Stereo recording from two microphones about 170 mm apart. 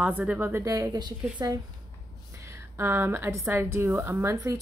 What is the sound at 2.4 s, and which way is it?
Speech, 15° right (ahead or behind).